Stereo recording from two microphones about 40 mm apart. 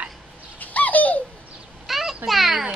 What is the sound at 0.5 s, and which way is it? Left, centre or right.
Bird, left.